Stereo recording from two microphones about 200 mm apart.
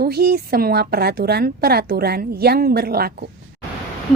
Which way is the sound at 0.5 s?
50° right (ahead or behind).